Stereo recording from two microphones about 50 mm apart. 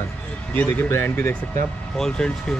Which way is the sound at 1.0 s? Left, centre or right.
Left.